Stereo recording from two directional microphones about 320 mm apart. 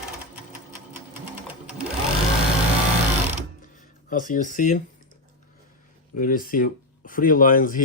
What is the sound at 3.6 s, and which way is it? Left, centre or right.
Music, left.